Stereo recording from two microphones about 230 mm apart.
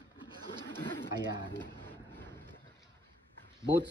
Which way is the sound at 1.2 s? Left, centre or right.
Centre.